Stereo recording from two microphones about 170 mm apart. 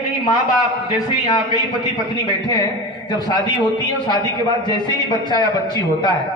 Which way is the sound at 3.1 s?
25° left (ahead or behind).